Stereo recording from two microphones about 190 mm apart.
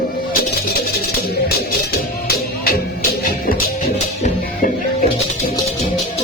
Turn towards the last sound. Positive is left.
turn(degrees=40)  # may be behind; listen again after turning